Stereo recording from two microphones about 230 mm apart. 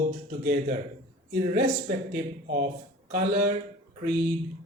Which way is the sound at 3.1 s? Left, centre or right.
Right.